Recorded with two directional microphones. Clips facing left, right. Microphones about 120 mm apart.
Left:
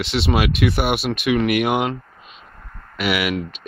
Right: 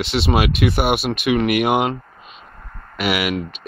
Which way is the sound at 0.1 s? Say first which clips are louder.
Right 1 dB; 40° right (ahead or behind).